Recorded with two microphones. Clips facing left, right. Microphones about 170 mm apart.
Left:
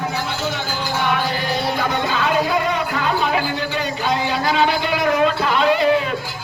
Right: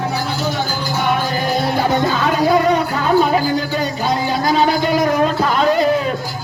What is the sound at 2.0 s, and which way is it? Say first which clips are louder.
Music: right 3 dB; 40° right (ahead or behind).